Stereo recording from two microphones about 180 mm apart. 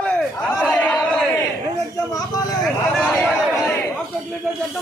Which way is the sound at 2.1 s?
20° left (ahead or behind).